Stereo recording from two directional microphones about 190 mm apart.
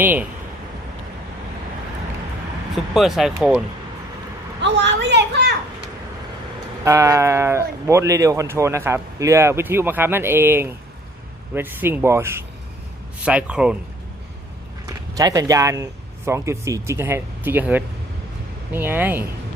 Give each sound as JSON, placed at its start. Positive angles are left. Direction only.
{"t": 0.0, "sound": "speech", "side_deg": -10}
{"t": 2.7, "sound": "speech", "side_deg": 0}
{"t": 4.6, "sound": "a woman's voice", "side_deg": -65}
{"t": 6.8, "sound": "speech", "side_deg": -15}
{"t": 15.1, "sound": "speech", "side_deg": -20}